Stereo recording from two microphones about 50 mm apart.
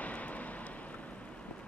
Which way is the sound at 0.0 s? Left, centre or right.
Left.